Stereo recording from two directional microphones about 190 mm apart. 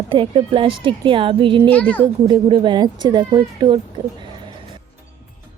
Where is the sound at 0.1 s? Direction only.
25° right (ahead or behind).